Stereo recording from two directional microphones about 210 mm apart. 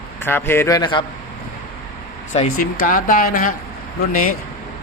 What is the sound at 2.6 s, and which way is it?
Speech, 40° left (ahead or behind).